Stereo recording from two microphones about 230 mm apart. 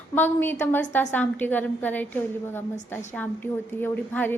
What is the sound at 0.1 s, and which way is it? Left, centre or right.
A woman's voice, centre.